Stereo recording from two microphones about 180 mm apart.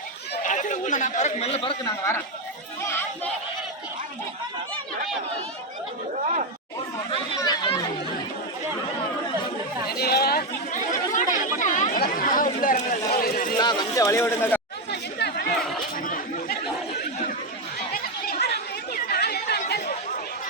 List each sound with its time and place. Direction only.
0.4 s speech: 45° left (ahead or behind)
1.8 s speech: 15° left (ahead or behind)
6.2 s speech: 40° right (ahead or behind)
7.1 s speech: 25° left (ahead or behind)
10.0 s chatter: 60° left (ahead or behind)
12.5 s a sound: 45° left (ahead or behind)
13.6 s speech: 25° left (ahead or behind)
14.8 s chatter: 70° left (ahead or behind)
15.5 s chatter: centre (ahead or behind)
16.0 s chatter: 50° left (ahead or behind)
17.7 s chatter: 55° left (ahead or behind)